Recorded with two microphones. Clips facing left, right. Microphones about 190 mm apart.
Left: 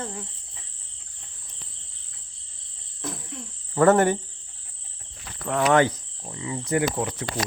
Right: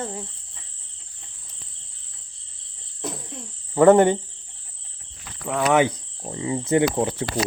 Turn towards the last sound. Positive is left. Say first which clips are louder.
# right 5 dB
turn(degrees=-30)  # may be behind; listen again after turning